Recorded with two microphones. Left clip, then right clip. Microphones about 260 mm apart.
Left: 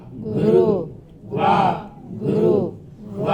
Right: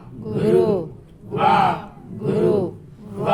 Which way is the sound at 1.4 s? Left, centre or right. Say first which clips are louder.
Right 1 dB; right.